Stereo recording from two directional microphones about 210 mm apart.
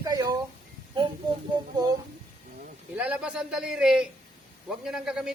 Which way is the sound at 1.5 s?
20° right (ahead or behind).